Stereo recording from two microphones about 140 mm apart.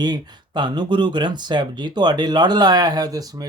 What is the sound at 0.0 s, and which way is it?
Speech, 30° right (ahead or behind).